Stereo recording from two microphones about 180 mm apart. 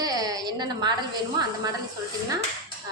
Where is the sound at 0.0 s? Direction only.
20° right (ahead or behind).